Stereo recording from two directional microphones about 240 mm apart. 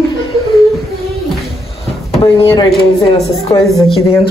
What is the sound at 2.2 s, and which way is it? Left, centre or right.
Speech, centre.